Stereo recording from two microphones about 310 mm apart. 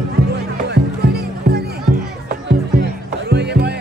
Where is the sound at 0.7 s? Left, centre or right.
Right.